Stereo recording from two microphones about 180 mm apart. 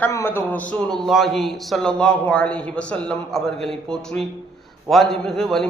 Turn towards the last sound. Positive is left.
turn(degrees=0)  # may be behind; listen again after turning